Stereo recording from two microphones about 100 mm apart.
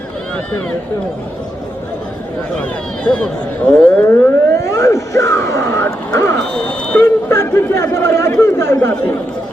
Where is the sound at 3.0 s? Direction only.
10° left (ahead or behind).